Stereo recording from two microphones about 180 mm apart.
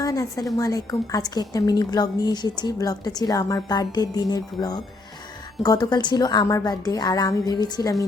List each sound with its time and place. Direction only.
0.0 s a woman's voice: 20° left (ahead or behind)